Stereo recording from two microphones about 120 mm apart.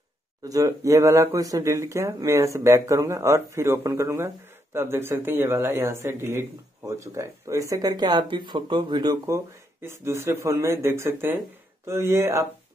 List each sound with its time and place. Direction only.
0.4 s speech: 30° right (ahead or behind)